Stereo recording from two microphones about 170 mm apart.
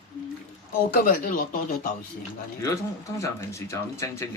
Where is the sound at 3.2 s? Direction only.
15° left (ahead or behind).